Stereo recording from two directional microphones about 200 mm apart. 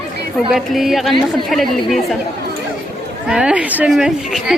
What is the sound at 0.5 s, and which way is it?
A woman's voice, centre (ahead or behind).